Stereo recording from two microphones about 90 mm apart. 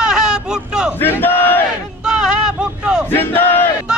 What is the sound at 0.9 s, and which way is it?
Battle cry, 20° left (ahead or behind).